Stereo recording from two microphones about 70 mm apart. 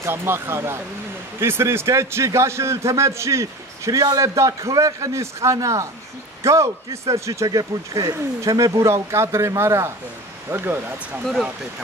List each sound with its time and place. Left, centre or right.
0.0 s a man's voice: right